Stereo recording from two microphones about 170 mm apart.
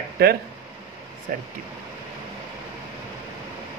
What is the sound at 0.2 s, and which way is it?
Speech, 70° right (ahead or behind).